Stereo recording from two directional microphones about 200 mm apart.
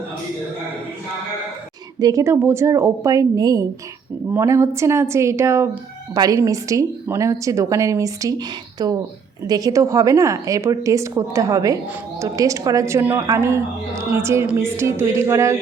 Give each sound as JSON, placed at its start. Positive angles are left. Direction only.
{"t": 2.0, "sound": "a woman's voice", "side_deg": -15}